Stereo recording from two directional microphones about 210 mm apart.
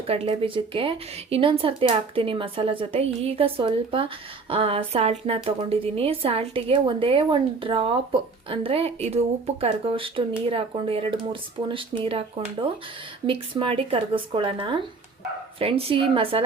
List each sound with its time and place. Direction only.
0.1 s speech: 25° right (ahead or behind)